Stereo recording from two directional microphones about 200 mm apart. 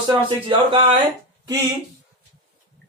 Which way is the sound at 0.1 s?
25° right (ahead or behind).